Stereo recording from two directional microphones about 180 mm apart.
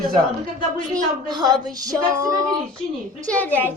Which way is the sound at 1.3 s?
25° right (ahead or behind).